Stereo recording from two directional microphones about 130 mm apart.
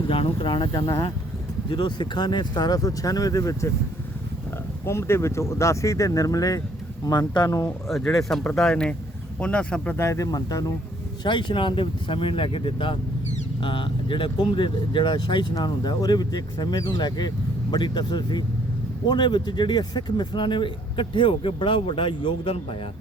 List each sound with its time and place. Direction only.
0.1 s speech: 45° left (ahead or behind); by 3.7 s 25° left (ahead or behind)
4.9 s speech: 20° left (ahead or behind)
7.9 s speech: centre (ahead or behind)
10.0 s speech: 25° left (ahead or behind); by 22.6 s 45° left (ahead or behind)